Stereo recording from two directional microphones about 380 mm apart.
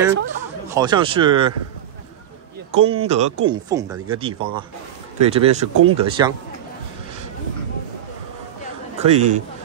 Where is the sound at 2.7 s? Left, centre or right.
Centre.